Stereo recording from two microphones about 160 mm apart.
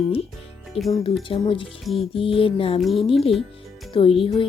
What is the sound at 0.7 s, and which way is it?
Speech, 35° left (ahead or behind).